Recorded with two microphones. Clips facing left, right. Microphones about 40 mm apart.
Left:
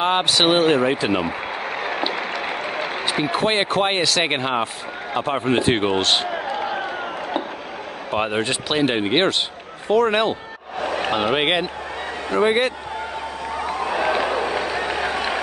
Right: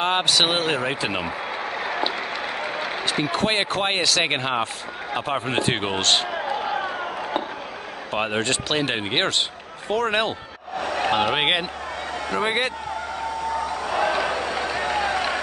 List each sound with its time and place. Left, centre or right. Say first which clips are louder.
0.0 s speech: left 2 dB; centre
3.1 s speech: left 2 dB; centre
8.1 s speech: left 2 dB; centre
10.8 s a sound: left 2 dB; left
11.1 s speech: left 1 dB; centre
13.8 s a sound: left 2 dB; left